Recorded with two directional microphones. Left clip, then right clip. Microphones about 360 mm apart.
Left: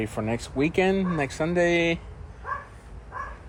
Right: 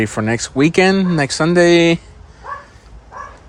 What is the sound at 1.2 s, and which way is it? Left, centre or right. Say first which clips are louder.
Speech: right 13 dB; right.